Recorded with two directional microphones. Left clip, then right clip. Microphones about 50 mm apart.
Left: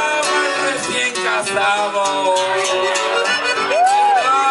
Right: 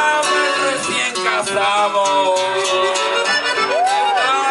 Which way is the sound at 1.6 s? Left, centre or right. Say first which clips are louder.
Right 2 dB; left.